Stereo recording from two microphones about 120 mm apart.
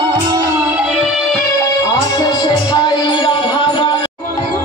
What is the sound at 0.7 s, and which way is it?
Music, 5° right (ahead or behind).